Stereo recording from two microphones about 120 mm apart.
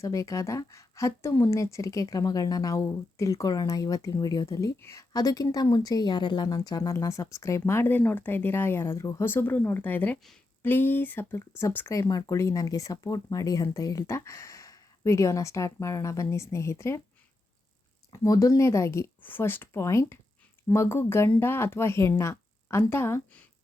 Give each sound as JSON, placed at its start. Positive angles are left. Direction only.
{"t": 0.0, "sound": "a woman's voice", "side_deg": 25}
{"t": 11.9, "sound": "a woman's voice", "side_deg": 30}
{"t": 18.2, "sound": "a woman's voice", "side_deg": 30}